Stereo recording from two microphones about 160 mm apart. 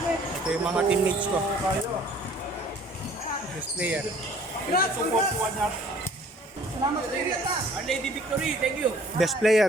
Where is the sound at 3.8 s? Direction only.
10° right (ahead or behind).